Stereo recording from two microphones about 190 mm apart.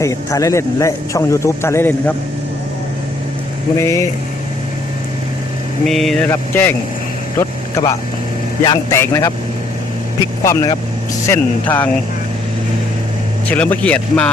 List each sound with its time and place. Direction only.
0.0 s a man's voice: 15° left (ahead or behind)
3.8 s a man's voice: 15° left (ahead or behind)
5.8 s a man's voice: centre (ahead or behind); by 9.3 s 15° left (ahead or behind)
10.4 s a man's voice: 15° left (ahead or behind)
13.5 s a man's voice: 10° left (ahead or behind)